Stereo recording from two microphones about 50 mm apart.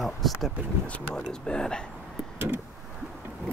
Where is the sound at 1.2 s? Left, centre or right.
Centre.